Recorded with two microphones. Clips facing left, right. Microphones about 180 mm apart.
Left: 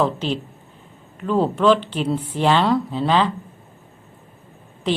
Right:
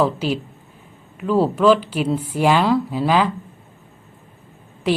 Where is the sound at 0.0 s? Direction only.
5° right (ahead or behind).